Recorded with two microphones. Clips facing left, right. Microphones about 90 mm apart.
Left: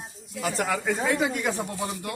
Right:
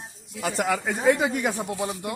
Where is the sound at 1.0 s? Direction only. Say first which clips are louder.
Right 7 dB; 15° right (ahead or behind).